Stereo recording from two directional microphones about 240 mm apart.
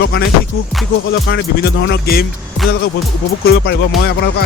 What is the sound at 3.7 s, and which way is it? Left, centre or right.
Music, left.